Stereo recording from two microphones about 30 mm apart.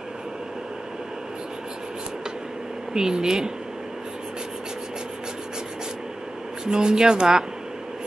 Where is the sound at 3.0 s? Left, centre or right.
Right.